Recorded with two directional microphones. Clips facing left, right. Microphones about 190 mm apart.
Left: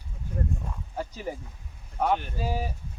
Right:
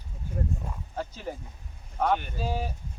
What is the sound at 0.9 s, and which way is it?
Speech, 10° left (ahead or behind).